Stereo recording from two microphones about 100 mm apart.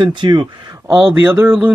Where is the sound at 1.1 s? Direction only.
20° right (ahead or behind).